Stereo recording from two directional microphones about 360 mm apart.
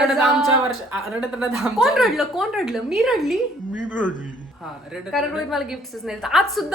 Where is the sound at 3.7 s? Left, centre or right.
Left.